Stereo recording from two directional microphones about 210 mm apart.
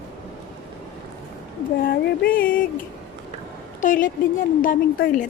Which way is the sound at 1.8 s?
45° left (ahead or behind).